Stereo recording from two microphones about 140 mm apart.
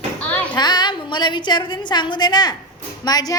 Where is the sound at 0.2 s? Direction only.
10° left (ahead or behind).